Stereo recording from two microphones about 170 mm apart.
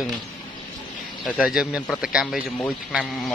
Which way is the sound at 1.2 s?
Centre (ahead or behind).